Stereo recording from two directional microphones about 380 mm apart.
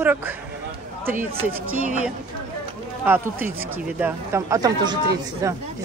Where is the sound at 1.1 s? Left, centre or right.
Centre.